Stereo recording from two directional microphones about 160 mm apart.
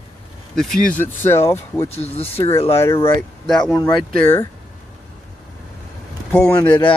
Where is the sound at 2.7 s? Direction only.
15° left (ahead or behind).